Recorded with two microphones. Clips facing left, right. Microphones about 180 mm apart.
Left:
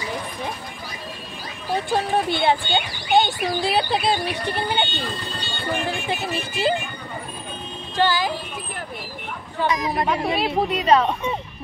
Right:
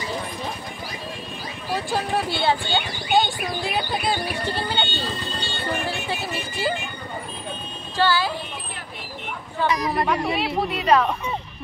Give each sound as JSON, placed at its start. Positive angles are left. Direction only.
{"t": 1.9, "sound": "speech", "side_deg": 20}
{"t": 3.6, "sound": "speech", "side_deg": 30}
{"t": 4.5, "sound": "speech", "side_deg": 15}
{"t": 5.9, "sound": "speech", "side_deg": 20}
{"t": 8.0, "sound": "speech", "side_deg": 15}
{"t": 9.6, "sound": "speech", "side_deg": 20}